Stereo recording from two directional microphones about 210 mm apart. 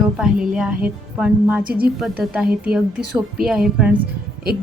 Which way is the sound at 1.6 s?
45° right (ahead or behind).